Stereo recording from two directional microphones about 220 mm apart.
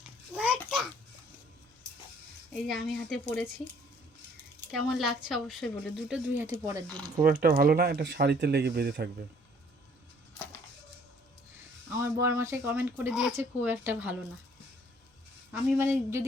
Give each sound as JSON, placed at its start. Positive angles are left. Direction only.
{"t": 2.5, "sound": "a woman's voice", "side_deg": 0}
{"t": 4.7, "sound": "a woman's voice", "side_deg": 0}
{"t": 7.2, "sound": "speech", "side_deg": -40}
{"t": 11.9, "sound": "speech", "side_deg": -10}
{"t": 15.5, "sound": "speech", "side_deg": -10}